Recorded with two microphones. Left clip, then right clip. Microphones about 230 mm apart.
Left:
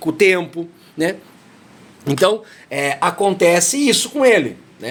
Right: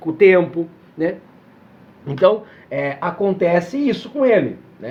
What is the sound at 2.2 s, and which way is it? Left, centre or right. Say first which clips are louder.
Speech: right 2 dB; left.